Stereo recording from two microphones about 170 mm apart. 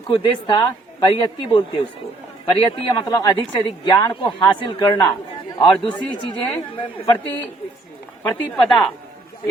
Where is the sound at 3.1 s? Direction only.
25° left (ahead or behind).